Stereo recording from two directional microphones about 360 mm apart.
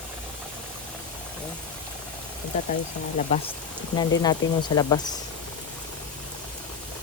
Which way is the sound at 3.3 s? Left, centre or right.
Centre.